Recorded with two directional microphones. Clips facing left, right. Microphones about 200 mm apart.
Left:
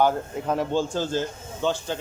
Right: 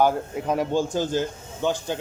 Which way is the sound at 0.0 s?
10° right (ahead or behind).